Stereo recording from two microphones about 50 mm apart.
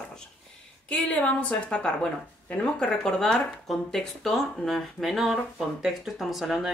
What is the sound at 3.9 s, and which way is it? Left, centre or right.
A woman's voice, centre.